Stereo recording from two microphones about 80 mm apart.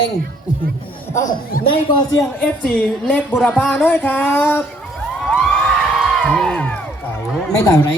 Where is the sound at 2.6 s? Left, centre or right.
Centre.